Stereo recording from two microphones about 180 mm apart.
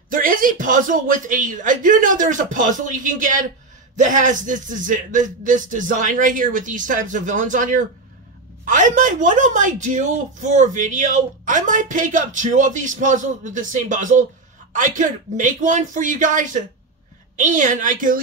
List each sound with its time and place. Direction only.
0.1 s a woman's voice: 50° right (ahead or behind)